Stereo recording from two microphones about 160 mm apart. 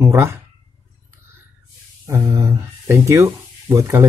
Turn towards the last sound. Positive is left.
turn(degrees=-20)  # may be behind; listen again after turning